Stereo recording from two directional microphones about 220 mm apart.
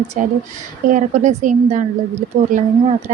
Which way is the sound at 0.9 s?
35° right (ahead or behind).